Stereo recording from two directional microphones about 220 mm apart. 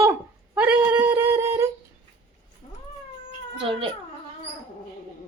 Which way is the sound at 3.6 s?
25° right (ahead or behind).